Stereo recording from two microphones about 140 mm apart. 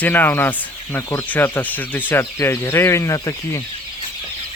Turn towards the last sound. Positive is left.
turn(degrees=25)  # may be behind; listen again after turning